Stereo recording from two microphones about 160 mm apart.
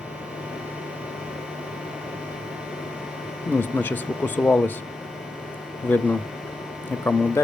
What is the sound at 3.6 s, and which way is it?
Speech, 10° left (ahead or behind).